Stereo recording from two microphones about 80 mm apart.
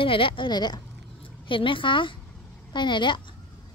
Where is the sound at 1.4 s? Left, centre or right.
Left.